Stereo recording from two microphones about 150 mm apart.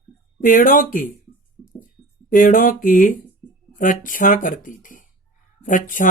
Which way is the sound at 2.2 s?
65° left (ahead or behind).